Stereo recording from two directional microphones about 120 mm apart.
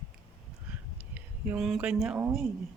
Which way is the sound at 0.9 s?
10° right (ahead or behind).